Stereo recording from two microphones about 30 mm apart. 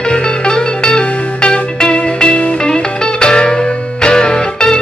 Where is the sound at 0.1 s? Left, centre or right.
Left.